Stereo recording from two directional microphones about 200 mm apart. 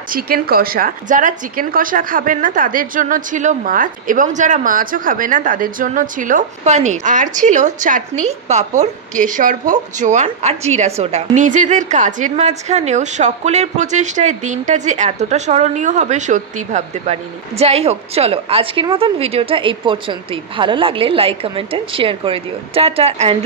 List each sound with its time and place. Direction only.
0.1 s a woman's voice: 50° right (ahead or behind); by 23.3 s 30° right (ahead or behind)